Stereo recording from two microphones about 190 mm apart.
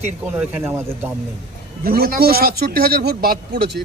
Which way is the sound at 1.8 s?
50° right (ahead or behind).